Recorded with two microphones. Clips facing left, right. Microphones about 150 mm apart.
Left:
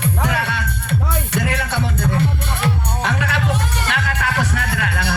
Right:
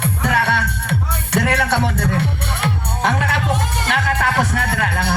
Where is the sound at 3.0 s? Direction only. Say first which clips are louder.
Right 3 dB; 50° right (ahead or behind).